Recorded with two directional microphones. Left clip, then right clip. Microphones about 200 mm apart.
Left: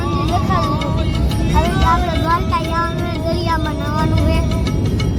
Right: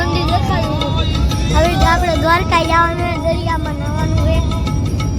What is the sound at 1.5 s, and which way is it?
Vehicle, 15° right (ahead or behind).